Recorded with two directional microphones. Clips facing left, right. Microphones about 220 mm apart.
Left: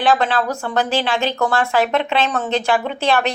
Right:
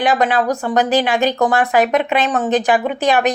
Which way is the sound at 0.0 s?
15° right (ahead or behind).